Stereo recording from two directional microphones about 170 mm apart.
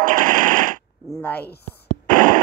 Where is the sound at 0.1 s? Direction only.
50° right (ahead or behind).